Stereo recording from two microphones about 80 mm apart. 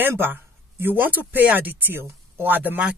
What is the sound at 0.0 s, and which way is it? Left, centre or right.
Speech, right.